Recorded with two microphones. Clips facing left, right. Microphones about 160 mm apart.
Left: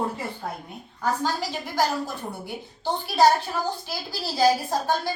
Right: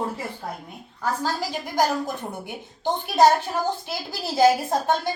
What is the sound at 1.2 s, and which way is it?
A woman's voice, 10° right (ahead or behind).